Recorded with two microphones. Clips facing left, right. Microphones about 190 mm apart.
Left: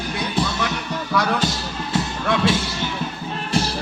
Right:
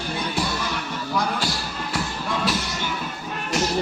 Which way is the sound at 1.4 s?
20° left (ahead or behind).